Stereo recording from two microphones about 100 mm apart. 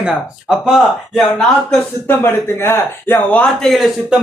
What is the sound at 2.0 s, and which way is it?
Speech, 25° left (ahead or behind).